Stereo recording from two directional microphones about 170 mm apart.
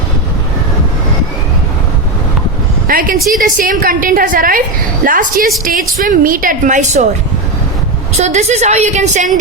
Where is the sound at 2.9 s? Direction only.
55° right (ahead or behind).